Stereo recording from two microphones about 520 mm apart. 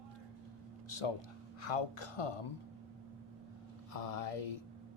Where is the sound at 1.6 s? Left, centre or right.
Left.